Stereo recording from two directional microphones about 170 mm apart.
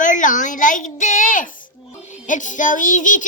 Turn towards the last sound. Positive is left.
turn(degrees=50)  # may be behind; listen again after turning